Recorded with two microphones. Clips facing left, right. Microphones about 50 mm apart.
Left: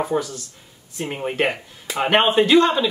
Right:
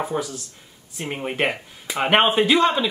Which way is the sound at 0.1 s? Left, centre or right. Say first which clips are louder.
Left 4 dB; centre.